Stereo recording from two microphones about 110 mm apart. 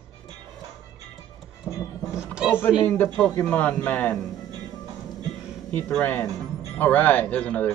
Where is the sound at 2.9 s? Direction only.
10° left (ahead or behind).